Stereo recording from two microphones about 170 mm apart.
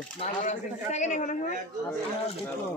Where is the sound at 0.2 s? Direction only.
45° left (ahead or behind).